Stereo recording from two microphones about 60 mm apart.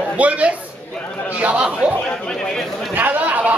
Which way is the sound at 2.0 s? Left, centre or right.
Centre.